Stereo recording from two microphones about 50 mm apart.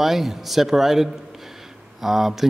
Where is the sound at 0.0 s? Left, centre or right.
Centre.